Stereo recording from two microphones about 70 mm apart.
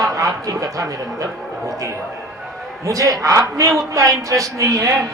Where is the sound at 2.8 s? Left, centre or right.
Right.